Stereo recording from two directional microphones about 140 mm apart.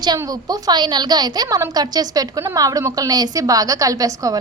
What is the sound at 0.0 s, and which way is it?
A woman's voice, 30° right (ahead or behind).